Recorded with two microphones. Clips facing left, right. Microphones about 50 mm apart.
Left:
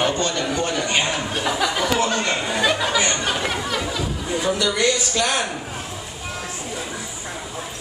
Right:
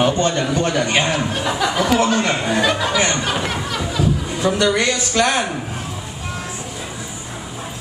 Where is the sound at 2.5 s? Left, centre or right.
Centre.